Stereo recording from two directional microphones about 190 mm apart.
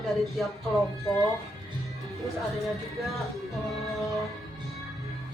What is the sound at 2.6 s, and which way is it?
Speech, centre (ahead or behind).